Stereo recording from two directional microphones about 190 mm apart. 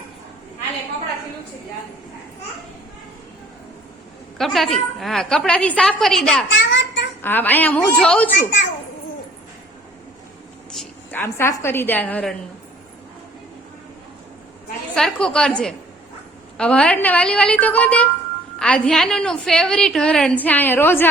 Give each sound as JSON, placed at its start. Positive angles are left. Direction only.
{"t": 4.4, "sound": "a woman's voice", "side_deg": 0}
{"t": 6.5, "sound": "a sound", "side_deg": 75}
{"t": 7.2, "sound": "a woman's voice", "side_deg": 10}
{"t": 10.7, "sound": "a woman's voice", "side_deg": 5}
{"t": 14.9, "sound": "a woman's voice", "side_deg": 5}